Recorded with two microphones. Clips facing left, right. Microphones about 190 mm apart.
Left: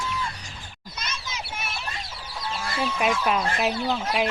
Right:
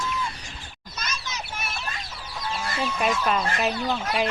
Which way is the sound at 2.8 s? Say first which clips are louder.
Left 1 dB; 5° left (ahead or behind).